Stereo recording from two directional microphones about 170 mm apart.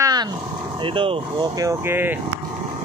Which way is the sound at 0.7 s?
30° right (ahead or behind).